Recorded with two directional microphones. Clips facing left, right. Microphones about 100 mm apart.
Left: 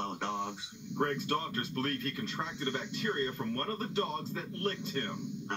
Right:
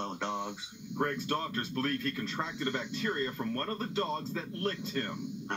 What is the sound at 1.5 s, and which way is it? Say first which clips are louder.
Speech: right 2 dB; 30° right (ahead or behind).